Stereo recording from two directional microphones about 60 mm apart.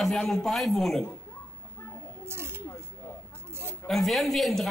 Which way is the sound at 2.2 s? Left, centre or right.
Right.